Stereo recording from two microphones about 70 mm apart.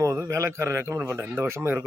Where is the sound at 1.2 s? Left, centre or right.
Right.